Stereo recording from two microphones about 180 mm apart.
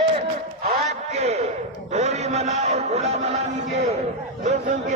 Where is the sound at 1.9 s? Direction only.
35° right (ahead or behind).